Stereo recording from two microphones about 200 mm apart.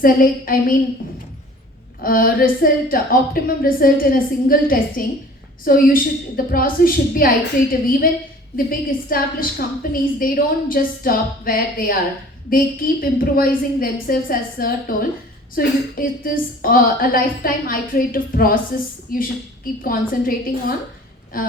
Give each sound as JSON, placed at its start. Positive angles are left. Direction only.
{"t": 0.0, "sound": "a woman's voice", "side_deg": 45}
{"t": 2.0, "sound": "a woman's voice", "side_deg": 45}